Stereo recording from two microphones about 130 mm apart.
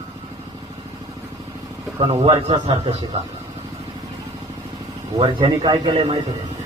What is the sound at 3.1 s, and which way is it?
Speech, 50° right (ahead or behind).